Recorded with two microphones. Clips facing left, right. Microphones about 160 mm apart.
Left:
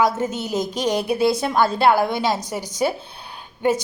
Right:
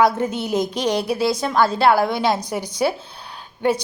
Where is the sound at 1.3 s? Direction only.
5° left (ahead or behind).